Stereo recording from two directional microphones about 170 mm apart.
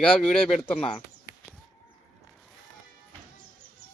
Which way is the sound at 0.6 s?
35° left (ahead or behind).